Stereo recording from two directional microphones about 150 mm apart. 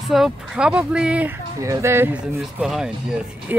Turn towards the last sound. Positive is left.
turn(degrees=-5)  # may be behind; listen again after turning